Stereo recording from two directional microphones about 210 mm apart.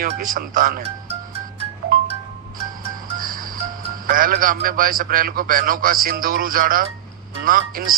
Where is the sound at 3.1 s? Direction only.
40° right (ahead or behind).